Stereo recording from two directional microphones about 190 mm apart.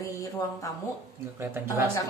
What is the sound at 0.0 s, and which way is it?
Speech, 15° left (ahead or behind).